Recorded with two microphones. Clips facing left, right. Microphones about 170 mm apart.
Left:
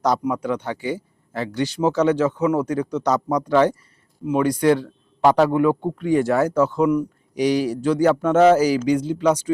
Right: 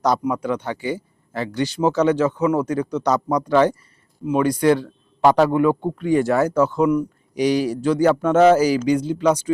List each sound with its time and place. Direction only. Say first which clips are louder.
0.0 s a man's voice: right 1 dB; centre (ahead or behind)
6.5 s a man's voice: right 1 dB; 15° right (ahead or behind)
7.3 s a man's voice: right 1 dB; centre (ahead or behind)